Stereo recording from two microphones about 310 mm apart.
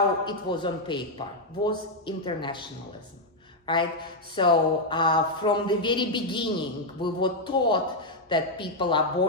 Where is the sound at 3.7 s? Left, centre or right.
Centre.